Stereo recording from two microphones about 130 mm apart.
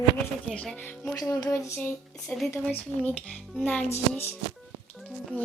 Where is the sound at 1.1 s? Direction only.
30° left (ahead or behind).